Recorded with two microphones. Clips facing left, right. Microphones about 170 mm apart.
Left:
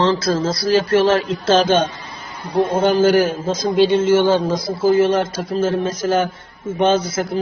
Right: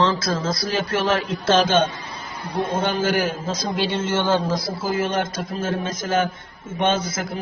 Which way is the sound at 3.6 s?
15° left (ahead or behind).